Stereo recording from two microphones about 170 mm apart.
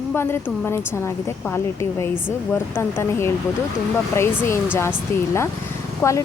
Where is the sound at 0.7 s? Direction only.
15° left (ahead or behind).